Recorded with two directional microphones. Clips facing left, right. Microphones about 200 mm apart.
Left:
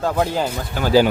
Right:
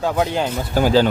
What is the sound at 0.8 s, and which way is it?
Speech, 40° right (ahead or behind).